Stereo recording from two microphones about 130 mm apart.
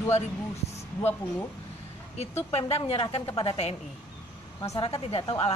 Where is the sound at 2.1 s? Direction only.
50° left (ahead or behind).